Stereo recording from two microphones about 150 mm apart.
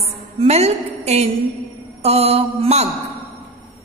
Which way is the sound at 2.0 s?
45° right (ahead or behind).